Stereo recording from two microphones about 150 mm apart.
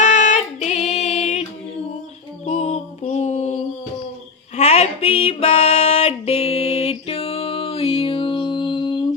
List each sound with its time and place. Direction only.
0.0 s music: 55° left (ahead or behind)
2.5 s music: 45° left (ahead or behind); by 9.0 s 30° left (ahead or behind)